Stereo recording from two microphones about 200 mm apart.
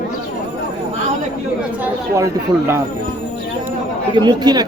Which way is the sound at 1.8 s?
15° right (ahead or behind).